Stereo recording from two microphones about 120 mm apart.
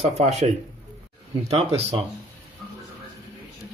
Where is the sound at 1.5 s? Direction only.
60° right (ahead or behind).